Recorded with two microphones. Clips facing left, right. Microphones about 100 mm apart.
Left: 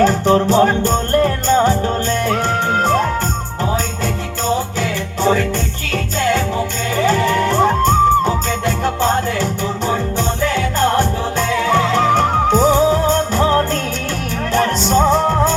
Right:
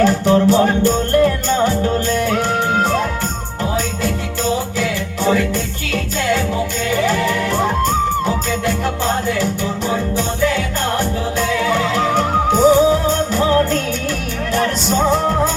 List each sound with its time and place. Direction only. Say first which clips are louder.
0.0 s music: even; 35° left (ahead or behind)
4.8 s music: left 1 dB; 35° left (ahead or behind)
6.9 s music: left 3 dB; 35° left (ahead or behind)